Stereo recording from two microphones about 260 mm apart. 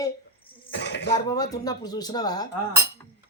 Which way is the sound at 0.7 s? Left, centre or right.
Left.